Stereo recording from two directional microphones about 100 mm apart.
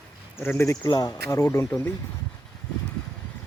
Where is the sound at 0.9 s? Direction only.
45° left (ahead or behind).